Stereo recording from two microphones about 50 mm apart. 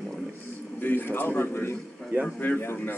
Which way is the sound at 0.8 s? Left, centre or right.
Left.